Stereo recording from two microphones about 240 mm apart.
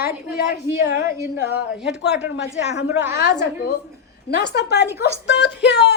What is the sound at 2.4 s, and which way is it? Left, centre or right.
Speech, left.